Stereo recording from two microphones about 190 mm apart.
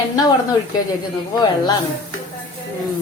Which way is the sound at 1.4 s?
20° left (ahead or behind).